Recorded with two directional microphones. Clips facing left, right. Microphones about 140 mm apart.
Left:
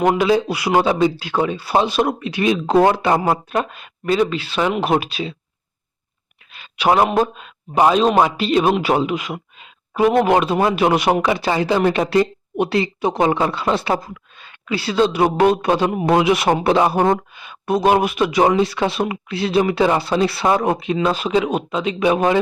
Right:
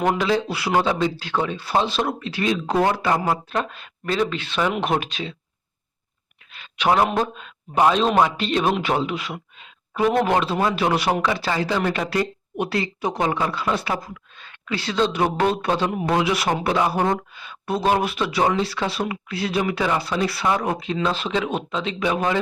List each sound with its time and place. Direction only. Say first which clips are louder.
0.0 s a man's voice: left 5 dB; 10° left (ahead or behind)
6.5 s speech: left 3 dB; 10° left (ahead or behind); by 14.2 s 30° left (ahead or behind)
14.3 s a man's voice: left 4 dB; 10° left (ahead or behind)